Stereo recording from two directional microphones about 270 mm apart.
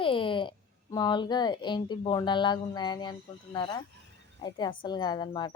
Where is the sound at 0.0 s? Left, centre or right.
Centre.